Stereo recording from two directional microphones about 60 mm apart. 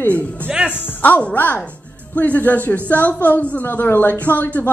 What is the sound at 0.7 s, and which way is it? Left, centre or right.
A woman's voice, left.